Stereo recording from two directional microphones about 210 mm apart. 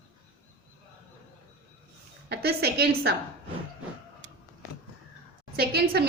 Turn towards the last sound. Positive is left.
turn(degrees=-50)  # may be behind; listen again after turning